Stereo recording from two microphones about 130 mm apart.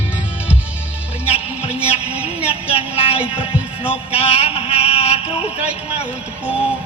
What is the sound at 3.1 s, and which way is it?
Music, 10° right (ahead or behind).